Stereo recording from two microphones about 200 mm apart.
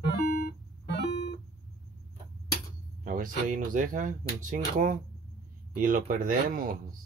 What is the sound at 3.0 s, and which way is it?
Speech, 45° right (ahead or behind).